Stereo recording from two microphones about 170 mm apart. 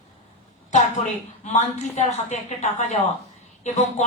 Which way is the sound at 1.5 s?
45° left (ahead or behind).